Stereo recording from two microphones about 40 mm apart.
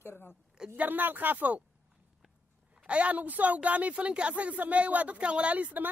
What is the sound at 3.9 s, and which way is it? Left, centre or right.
Speech, right.